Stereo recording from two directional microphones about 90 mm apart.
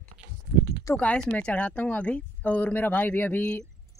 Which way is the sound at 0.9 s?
10° left (ahead or behind).